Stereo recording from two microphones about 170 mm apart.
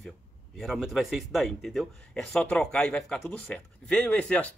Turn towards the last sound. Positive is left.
turn(degrees=5)  # may be behind; listen again after turning